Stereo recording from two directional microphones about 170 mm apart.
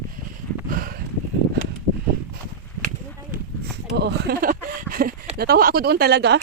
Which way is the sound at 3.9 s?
75° right (ahead or behind).